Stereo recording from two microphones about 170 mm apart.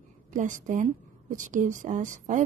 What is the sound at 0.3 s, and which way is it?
A woman's voice, 50° right (ahead or behind).